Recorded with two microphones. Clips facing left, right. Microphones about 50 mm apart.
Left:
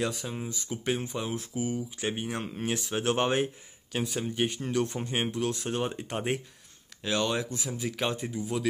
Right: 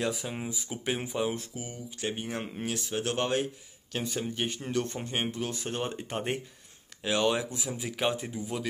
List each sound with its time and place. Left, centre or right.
0.0 s speech: centre
0.3 s speech: centre
1.6 s speech: centre
2.2 s speech: centre
2.9 s speech: centre
3.9 s speech: centre
7.0 s speech: centre